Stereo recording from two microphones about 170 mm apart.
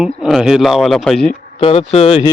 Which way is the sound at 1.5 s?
35° left (ahead or behind).